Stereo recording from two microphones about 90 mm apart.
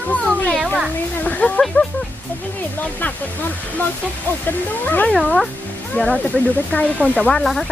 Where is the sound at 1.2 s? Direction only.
15° left (ahead or behind).